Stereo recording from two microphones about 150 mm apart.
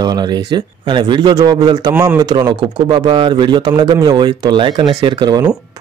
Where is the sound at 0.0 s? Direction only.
25° right (ahead or behind).